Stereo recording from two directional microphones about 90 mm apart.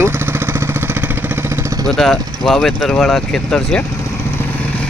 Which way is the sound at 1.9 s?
5° left (ahead or behind).